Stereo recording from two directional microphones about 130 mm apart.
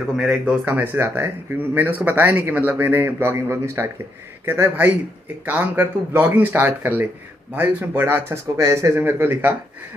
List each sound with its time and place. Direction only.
0.1 s speech: centre (ahead or behind)
0.9 s speech: 20° right (ahead or behind)